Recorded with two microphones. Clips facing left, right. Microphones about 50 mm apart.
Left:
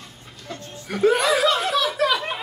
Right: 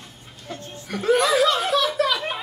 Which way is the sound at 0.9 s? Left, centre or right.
Centre.